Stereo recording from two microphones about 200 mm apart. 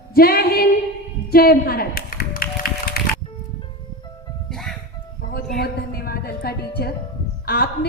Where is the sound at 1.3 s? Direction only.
50° left (ahead or behind).